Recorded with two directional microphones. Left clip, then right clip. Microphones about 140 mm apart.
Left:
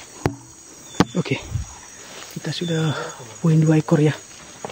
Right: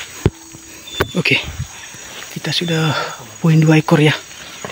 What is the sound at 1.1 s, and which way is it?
Insect, 5° left (ahead or behind).